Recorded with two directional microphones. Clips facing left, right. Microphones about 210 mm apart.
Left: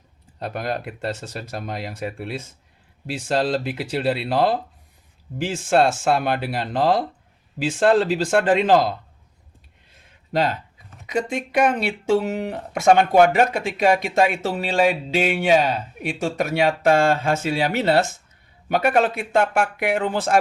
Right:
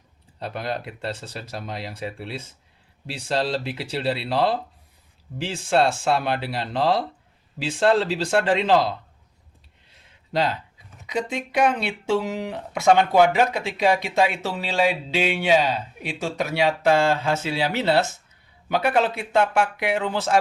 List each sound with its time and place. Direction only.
0.3 s speech: 50° left (ahead or behind)
9.9 s a sound: 50° left (ahead or behind)
11.0 s speech: 50° left (ahead or behind)